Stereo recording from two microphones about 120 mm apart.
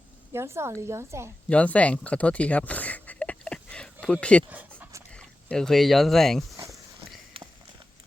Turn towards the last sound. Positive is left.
turn(degrees=-50)  # may be behind; listen again after turning